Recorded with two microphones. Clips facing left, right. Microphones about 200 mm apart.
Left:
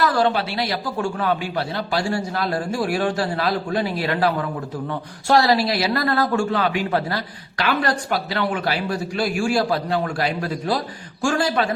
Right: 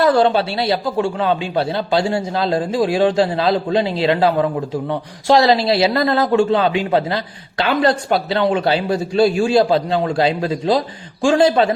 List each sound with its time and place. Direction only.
0.0 s a man's voice: 25° right (ahead or behind)